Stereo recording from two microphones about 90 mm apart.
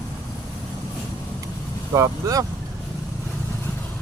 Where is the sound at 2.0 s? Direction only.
35° right (ahead or behind).